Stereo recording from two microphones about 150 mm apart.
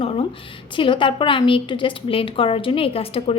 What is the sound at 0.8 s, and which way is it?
A woman's voice, 35° left (ahead or behind).